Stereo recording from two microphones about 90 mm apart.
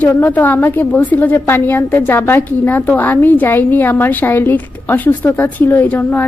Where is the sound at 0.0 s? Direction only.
20° left (ahead or behind).